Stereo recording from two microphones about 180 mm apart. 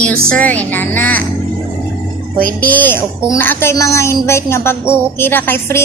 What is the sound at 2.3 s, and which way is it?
Speech, 50° right (ahead or behind).